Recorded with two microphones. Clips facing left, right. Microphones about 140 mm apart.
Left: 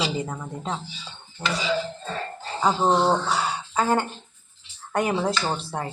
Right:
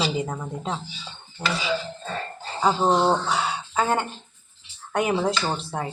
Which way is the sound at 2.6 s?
5° right (ahead or behind).